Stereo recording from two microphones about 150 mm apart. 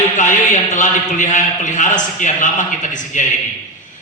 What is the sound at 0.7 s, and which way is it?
A man's voice, 55° left (ahead or behind).